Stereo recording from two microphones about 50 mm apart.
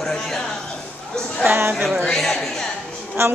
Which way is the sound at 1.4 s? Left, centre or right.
Right.